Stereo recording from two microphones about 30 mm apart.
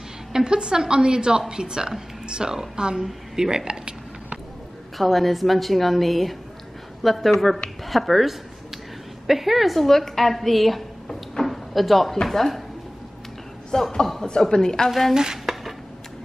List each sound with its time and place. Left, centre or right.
0.3 s a woman's voice: right
4.9 s a woman's voice: centre
9.8 s a woman's voice: centre
11.4 s a sound: centre
12.3 s speech: centre
13.7 s a woman's voice: centre
14.9 s a woman's voice: centre
15.5 s dishes: centre